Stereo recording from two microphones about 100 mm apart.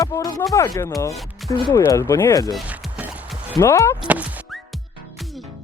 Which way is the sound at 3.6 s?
30° left (ahead or behind).